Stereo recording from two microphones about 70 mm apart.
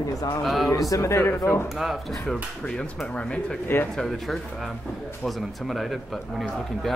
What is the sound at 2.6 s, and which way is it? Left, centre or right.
Speech, centre.